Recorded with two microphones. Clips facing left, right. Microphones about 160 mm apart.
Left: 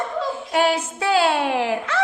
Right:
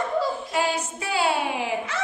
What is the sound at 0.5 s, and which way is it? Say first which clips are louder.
A woman's voice: left 9 dB; 85° left.